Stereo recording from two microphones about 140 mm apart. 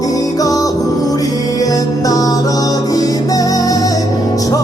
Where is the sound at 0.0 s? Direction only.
25° left (ahead or behind).